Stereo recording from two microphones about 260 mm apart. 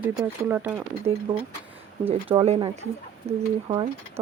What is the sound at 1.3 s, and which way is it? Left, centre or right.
Speech, centre.